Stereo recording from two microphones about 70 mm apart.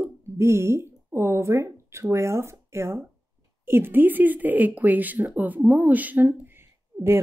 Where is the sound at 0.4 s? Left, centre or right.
Right.